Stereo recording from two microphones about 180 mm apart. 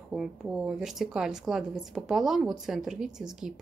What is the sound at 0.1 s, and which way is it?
Speech, 5° right (ahead or behind).